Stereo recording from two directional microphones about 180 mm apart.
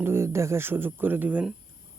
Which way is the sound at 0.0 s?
15° right (ahead or behind).